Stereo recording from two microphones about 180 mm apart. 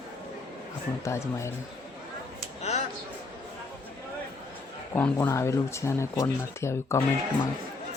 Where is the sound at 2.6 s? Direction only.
35° left (ahead or behind).